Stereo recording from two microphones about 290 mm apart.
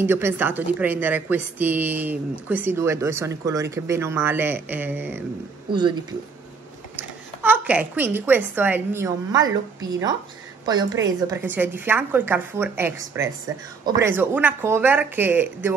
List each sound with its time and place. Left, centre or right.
0.0 s a woman's voice: centre
7.0 s a woman's voice: centre